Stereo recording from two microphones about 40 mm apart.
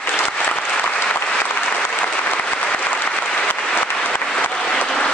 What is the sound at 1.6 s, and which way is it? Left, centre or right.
Applause, left.